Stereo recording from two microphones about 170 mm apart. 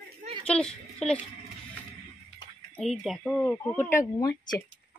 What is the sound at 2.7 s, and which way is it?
Speech, centre (ahead or behind).